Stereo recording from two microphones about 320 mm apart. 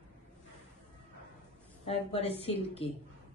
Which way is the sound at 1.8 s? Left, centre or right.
Centre.